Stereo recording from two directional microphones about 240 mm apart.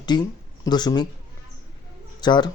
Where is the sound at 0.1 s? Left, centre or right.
Centre.